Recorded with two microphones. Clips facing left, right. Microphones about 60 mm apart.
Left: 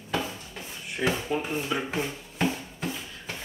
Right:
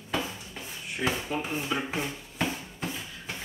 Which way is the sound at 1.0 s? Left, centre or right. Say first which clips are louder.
Left 3 dB; centre.